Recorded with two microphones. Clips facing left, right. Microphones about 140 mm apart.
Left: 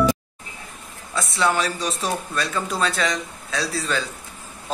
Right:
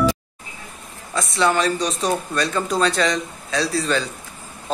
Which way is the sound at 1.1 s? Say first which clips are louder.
Right 2 dB; 5° left (ahead or behind).